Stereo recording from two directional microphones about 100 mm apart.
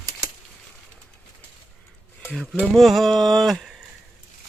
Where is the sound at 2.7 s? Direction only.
Centre (ahead or behind).